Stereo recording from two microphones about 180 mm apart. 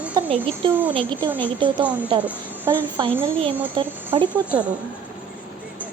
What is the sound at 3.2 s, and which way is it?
A child's voice, 30° right (ahead or behind).